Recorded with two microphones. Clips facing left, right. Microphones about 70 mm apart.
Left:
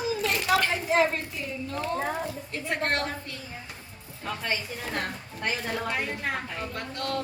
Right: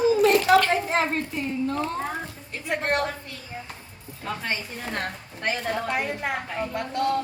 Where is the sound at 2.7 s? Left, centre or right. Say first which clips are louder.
Right 3 dB; centre.